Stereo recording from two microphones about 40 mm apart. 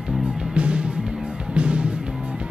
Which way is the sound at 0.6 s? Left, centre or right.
Right.